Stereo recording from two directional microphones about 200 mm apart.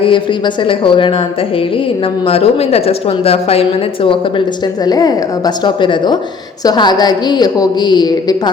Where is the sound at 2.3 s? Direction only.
30° left (ahead or behind).